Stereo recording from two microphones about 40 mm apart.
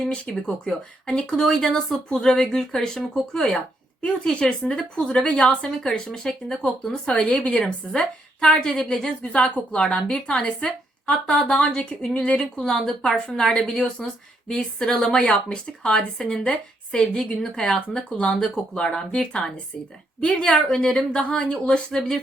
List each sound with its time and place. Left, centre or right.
0.3 s speech: centre
4.2 s a woman's voice: left
6.1 s speech: centre
7.1 s a woman's voice: left
7.6 s a woman's voice: centre
14.6 s a woman's voice: centre
16.0 s speech: centre
16.4 s a woman's voice: left
18.2 s a woman's voice: left